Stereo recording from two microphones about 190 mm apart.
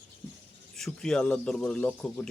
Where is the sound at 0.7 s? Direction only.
Centre (ahead or behind).